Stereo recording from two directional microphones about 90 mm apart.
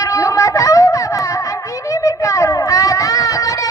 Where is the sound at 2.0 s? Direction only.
35° left (ahead or behind).